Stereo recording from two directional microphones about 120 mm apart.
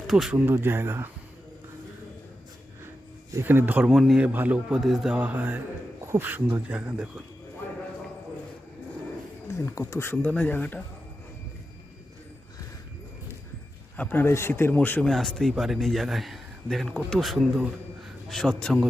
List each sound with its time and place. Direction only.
0.1 s speech: centre (ahead or behind)
0.3 s a man's voice: 15° right (ahead or behind)
3.3 s a man's voice: 20° right (ahead or behind)
3.8 s a man's voice: 5° right (ahead or behind)
9.6 s a man's voice: 20° left (ahead or behind)
13.9 s a man's voice: 15° left (ahead or behind)
15.0 s speech: 5° left (ahead or behind)